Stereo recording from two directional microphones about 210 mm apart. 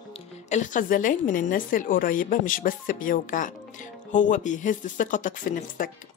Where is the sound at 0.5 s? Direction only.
40° left (ahead or behind).